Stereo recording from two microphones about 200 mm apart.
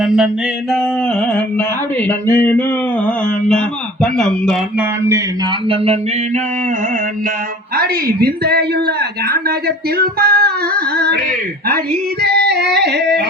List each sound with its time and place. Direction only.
0.0 s a sound: 5° right (ahead or behind)
0.7 s carnatic music: 5° left (ahead or behind)
4.0 s speech: 5° left (ahead or behind)
4.8 s speech: 15° right (ahead or behind)
5.6 s a sound: 30° right (ahead or behind)
7.8 s a man's voice: 50° right (ahead or behind)
12.2 s yodeling: 55° right (ahead or behind)